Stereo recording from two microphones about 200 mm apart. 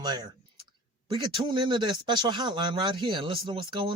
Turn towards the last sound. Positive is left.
turn(degrees=-25)  # may be behind; listen again after turning